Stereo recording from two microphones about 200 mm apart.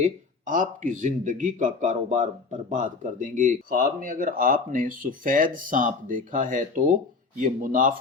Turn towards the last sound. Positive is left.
turn(degrees=-40)  # may be behind; listen again after turning